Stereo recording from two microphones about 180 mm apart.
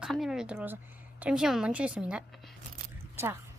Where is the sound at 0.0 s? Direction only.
Centre (ahead or behind).